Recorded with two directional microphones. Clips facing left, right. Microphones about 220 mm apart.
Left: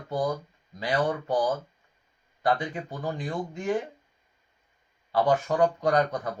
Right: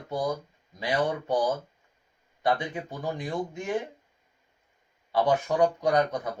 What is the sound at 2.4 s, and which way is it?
Speech, 20° right (ahead or behind).